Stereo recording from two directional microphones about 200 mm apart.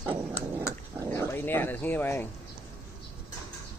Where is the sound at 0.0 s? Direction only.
10° right (ahead or behind).